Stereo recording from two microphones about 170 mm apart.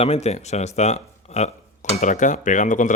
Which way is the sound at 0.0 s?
40° left (ahead or behind).